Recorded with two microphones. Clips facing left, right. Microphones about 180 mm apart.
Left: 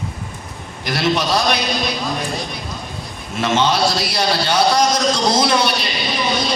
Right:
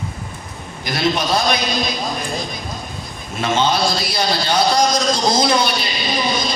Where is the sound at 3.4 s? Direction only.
70° left (ahead or behind).